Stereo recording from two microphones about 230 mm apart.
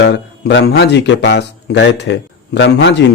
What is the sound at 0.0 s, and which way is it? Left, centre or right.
Speech, left.